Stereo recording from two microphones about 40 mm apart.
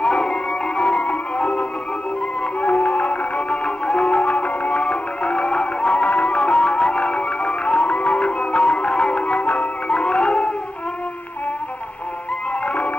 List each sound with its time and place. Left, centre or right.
0.0 s music: left
12.6 s music: left